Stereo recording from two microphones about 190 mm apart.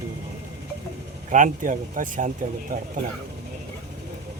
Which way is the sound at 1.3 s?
40° right (ahead or behind).